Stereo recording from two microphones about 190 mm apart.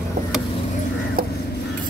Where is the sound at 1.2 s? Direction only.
50° right (ahead or behind).